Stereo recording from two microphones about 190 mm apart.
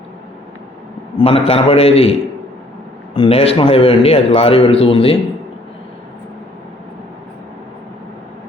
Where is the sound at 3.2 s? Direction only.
30° left (ahead or behind).